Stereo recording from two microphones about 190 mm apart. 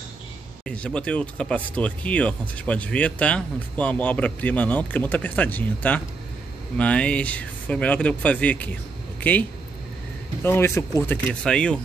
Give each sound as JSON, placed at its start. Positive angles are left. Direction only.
{"t": 0.7, "sound": "speech", "side_deg": 5}